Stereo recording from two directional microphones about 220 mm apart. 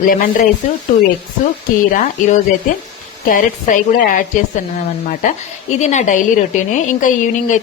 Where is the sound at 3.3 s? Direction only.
35° left (ahead or behind).